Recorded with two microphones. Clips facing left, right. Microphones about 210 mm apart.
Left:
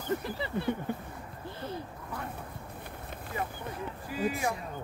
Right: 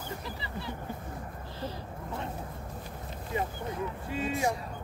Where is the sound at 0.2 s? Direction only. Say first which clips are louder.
Left 6 dB; 55° left (ahead or behind).